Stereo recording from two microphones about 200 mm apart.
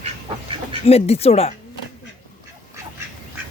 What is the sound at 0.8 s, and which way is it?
Speech, 30° left (ahead or behind).